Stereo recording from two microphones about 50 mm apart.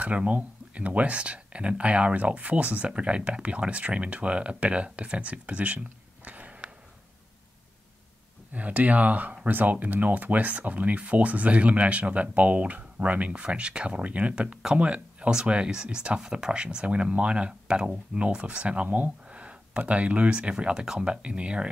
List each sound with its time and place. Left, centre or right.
0.0 s speech: right
6.2 s a sound: right
8.5 s speech: right; by 21.0 s centre
21.0 s speech: right